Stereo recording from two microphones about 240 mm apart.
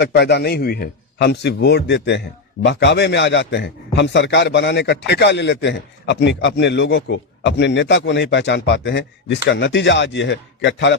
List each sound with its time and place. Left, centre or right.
0.0 s a man's voice: left